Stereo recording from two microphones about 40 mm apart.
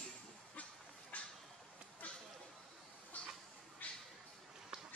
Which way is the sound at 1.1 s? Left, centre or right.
Left.